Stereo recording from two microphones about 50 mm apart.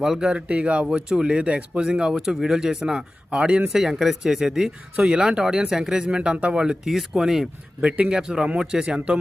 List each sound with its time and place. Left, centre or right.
0.0 s speech: centre
0.3 s speech: right; by 4.7 s centre
5.0 s speech: right
7.8 s speech: right
8.1 s speech: centre